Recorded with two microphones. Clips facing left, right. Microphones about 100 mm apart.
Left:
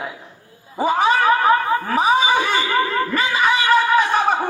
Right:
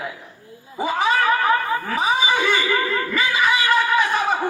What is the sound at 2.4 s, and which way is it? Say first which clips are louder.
Speech: even; 30° left (ahead or behind).